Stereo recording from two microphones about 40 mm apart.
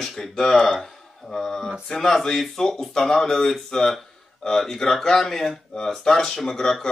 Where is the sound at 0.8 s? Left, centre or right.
Centre.